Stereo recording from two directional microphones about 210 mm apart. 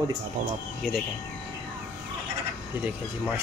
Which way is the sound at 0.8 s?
5° right (ahead or behind).